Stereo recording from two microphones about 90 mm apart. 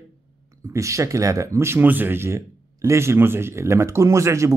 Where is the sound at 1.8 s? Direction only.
20° right (ahead or behind).